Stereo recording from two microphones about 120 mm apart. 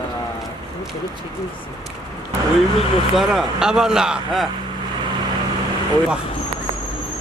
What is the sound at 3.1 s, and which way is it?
Speech, centre (ahead or behind).